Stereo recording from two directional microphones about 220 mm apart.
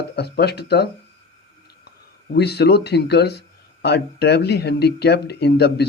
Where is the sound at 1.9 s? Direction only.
50° left (ahead or behind).